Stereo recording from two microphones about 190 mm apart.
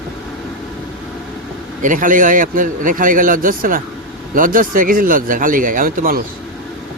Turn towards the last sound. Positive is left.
turn(degrees=-45)  # may be behind; listen again after turning